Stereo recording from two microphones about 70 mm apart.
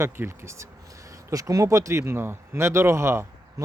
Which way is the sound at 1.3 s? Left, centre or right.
Right.